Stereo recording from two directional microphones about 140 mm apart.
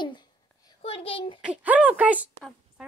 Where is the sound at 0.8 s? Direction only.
45° left (ahead or behind).